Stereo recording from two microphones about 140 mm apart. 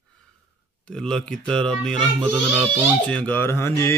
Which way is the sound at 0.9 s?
5° left (ahead or behind).